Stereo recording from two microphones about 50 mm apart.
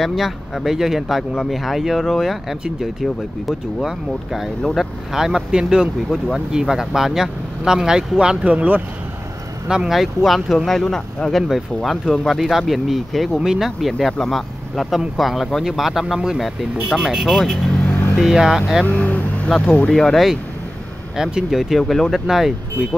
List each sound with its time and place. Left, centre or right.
0.0 s speech: centre
8.5 s speech: right
9.7 s speech: centre
9.9 s speech: centre
13.4 s speech: centre
18.9 s vehicle: left
19.6 s speech: left
19.9 s speech: centre
21.2 s speech: centre
21.7 s speech: centre